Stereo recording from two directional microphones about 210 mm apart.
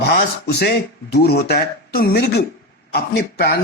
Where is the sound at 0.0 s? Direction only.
50° left (ahead or behind).